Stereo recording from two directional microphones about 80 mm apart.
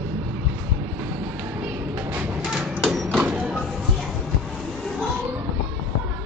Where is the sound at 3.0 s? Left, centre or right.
Centre.